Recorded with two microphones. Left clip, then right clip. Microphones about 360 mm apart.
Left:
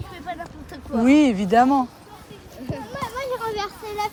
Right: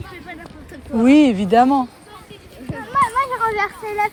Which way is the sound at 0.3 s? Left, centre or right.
Centre.